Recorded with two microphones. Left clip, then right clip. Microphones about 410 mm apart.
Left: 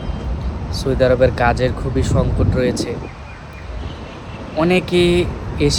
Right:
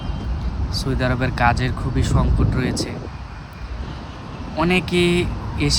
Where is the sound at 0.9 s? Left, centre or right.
Centre.